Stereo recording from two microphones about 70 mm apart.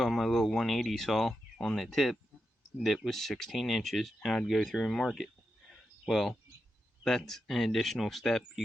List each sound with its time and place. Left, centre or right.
0.0 s speech: centre